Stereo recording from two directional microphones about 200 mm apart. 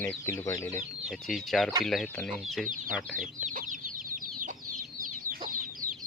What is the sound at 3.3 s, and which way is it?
Chicken, 40° right (ahead or behind).